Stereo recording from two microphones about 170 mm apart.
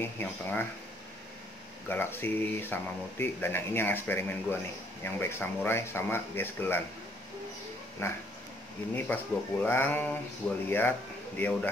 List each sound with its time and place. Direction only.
0.0 s speech: 10° left (ahead or behind)
1.9 s speech: 10° left (ahead or behind)
8.0 s speech: 15° left (ahead or behind)